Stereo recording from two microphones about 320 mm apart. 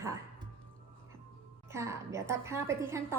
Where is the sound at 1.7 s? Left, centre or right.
Centre.